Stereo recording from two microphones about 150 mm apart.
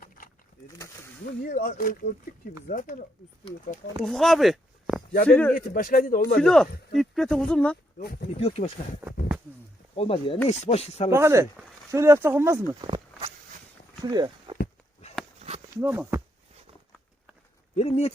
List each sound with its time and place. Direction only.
1.5 s speech: 65° left (ahead or behind)
4.0 s speech: 5° left (ahead or behind)
5.3 s speech: 10° left (ahead or behind)
5.5 s speech: 70° left (ahead or behind)
6.4 s speech: 5° left (ahead or behind)
7.9 s speech: 85° left
8.4 s speech: 45° left (ahead or behind)
9.9 s speech: 40° left (ahead or behind)
11.1 s speech: 20° right (ahead or behind)
12.8 s a sound: 30° right (ahead or behind)
14.0 s speech: 25° right (ahead or behind)
15.4 s a sound: 45° right (ahead or behind)
15.8 s speech: 15° right (ahead or behind)
17.7 s speech: 45° left (ahead or behind)